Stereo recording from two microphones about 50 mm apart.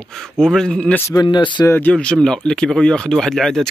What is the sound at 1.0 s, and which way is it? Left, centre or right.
Speech, left.